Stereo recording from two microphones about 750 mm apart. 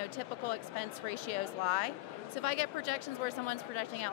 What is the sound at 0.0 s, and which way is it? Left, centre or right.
Speech, left.